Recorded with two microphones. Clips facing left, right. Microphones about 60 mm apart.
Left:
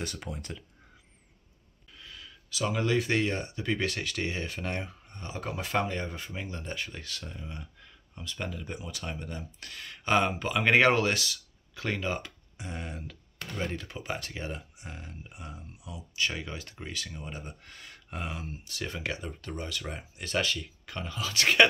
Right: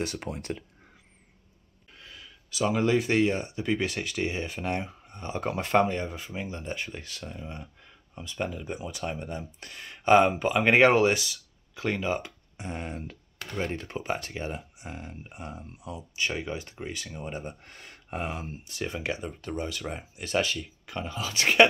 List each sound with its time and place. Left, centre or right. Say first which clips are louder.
0.0 s speech: right 5 dB; right
2.0 s speech: even; right
5.6 s speech: right 7 dB; right
5.9 s speech: right 3 dB; centre
12.5 s speech: right 4 dB; right
16.2 s speech: right 2 dB; right